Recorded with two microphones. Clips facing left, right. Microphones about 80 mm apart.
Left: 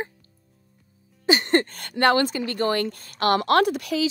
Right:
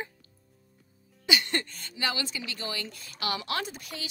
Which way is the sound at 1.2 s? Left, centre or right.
Left.